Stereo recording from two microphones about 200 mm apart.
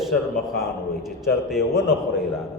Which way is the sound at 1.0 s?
Centre (ahead or behind).